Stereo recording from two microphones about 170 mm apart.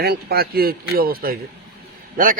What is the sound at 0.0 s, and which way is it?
A man's voice, 70° right (ahead or behind).